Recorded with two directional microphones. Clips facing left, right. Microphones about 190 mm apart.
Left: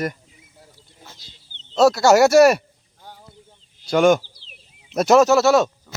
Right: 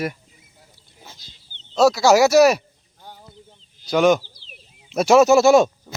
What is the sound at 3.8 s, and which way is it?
Speech, centre (ahead or behind).